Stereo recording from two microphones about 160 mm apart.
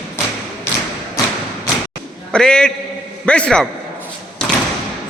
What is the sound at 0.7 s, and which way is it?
Thump, 15° left (ahead or behind).